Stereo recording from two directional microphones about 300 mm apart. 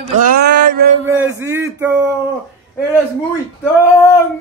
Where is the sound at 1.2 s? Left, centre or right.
Centre.